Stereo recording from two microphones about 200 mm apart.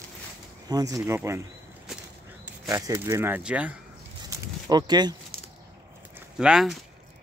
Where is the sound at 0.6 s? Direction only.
20° right (ahead or behind).